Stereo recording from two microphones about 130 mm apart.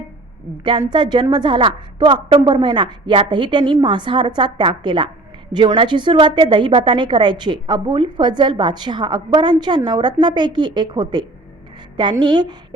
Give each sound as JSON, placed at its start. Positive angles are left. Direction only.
{"t": 0.6, "sound": "a woman's voice", "side_deg": -35}